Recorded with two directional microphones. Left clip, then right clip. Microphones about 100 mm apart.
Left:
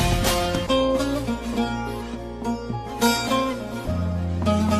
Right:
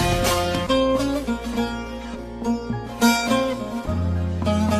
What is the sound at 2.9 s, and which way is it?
Music, 30° right (ahead or behind).